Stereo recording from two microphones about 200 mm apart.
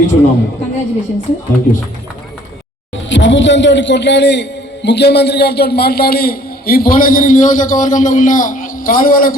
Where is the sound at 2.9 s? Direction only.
65° left (ahead or behind).